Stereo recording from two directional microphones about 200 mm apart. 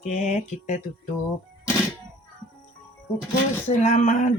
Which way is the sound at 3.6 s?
35° left (ahead or behind).